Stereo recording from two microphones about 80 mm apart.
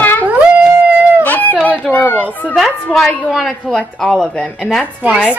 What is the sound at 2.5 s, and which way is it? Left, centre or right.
A woman's voice, centre.